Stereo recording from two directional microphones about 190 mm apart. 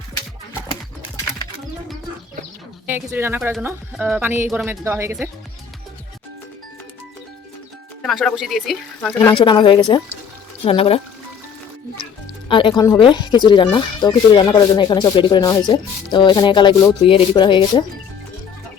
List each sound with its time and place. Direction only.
2.8 s speech: 10° right (ahead or behind)
8.0 s speech: centre (ahead or behind)
9.3 s speech: 25° left (ahead or behind)
12.5 s speech: 25° left (ahead or behind)